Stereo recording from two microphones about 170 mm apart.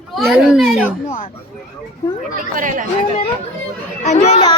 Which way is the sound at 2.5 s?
50° right (ahead or behind).